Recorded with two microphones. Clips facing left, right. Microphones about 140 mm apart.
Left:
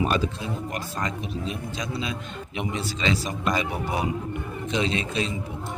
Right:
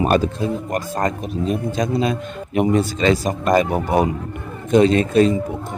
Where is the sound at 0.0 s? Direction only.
50° right (ahead or behind).